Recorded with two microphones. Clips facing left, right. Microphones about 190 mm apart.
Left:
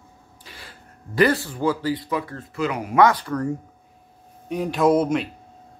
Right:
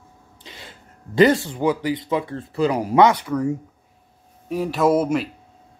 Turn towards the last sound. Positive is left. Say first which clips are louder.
# even
turn(degrees=-5)  # may be behind; listen again after turning